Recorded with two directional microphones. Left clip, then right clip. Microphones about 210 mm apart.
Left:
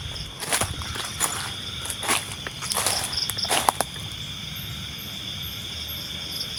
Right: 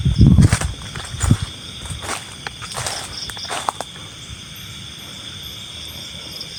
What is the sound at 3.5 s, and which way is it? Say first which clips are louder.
Cricket: left 1 dB; 10° left (ahead or behind).